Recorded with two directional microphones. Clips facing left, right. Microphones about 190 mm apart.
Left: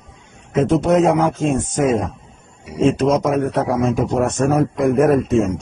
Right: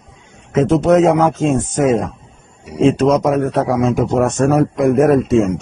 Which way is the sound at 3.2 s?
90° right.